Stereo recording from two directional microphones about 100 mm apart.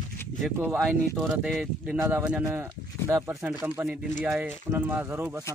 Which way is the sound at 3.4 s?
15° right (ahead or behind).